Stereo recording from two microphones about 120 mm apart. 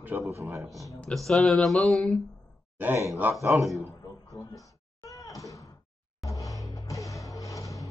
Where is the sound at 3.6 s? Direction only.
Centre (ahead or behind).